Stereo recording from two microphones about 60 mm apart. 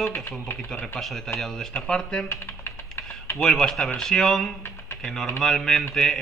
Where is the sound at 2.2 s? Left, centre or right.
Left.